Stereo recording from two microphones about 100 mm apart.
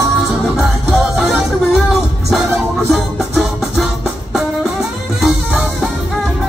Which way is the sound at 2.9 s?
Centre (ahead or behind).